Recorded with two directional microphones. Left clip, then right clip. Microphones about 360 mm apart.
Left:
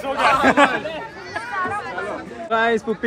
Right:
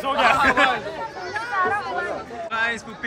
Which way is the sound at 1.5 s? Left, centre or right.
Right.